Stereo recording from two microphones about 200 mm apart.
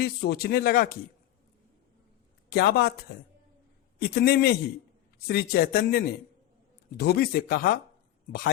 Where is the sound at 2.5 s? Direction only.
55° left (ahead or behind).